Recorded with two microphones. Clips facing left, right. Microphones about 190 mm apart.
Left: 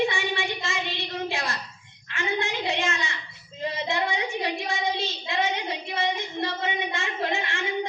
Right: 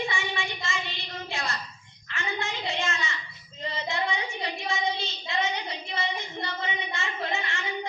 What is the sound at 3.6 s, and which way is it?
Child singing, 60° left (ahead or behind).